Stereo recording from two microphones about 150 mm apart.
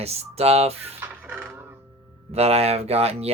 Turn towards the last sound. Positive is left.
turn(degrees=-45)  # may be behind; listen again after turning